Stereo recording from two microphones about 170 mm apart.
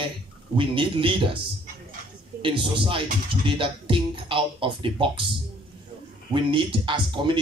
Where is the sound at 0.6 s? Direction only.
30° right (ahead or behind).